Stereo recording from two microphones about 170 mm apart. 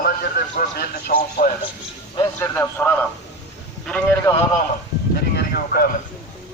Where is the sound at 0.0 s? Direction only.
65° left (ahead or behind).